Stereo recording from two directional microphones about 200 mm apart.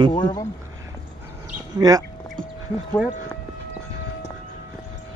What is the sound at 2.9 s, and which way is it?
Speech, 5° left (ahead or behind).